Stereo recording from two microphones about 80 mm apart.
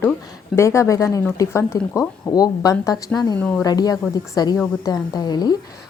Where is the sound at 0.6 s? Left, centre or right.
Left.